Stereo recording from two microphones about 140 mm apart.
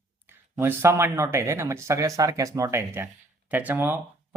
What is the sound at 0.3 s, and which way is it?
Speech, 15° right (ahead or behind).